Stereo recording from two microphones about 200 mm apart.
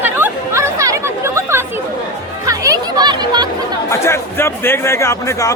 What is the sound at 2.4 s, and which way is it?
Chatter, 15° right (ahead or behind).